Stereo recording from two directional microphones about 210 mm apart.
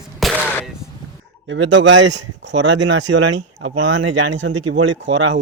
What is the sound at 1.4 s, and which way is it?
Speech, 60° right (ahead or behind).